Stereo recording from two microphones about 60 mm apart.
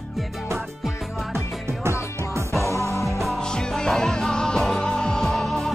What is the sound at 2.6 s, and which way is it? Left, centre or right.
Music, left.